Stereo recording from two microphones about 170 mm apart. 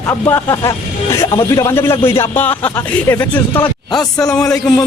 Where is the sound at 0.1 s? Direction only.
15° left (ahead or behind).